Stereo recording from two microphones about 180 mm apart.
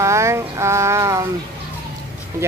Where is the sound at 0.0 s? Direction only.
15° right (ahead or behind).